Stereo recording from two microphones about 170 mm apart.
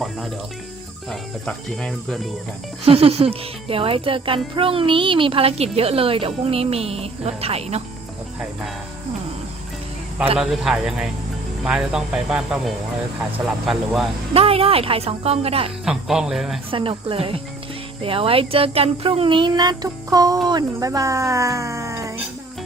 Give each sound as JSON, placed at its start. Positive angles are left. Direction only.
{"t": 0.0, "sound": "music", "side_deg": 0}
{"t": 1.1, "sound": "speech", "side_deg": 0}
{"t": 2.8, "sound": "a child's voice", "side_deg": -35}
{"t": 10.3, "sound": "speech", "side_deg": -5}
{"t": 14.3, "sound": "a child's voice", "side_deg": -35}
{"t": 15.8, "sound": "speech", "side_deg": -5}
{"t": 16.7, "sound": "a child's voice", "side_deg": -30}